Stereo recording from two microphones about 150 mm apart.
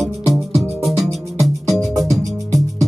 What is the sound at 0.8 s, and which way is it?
Music, centre (ahead or behind).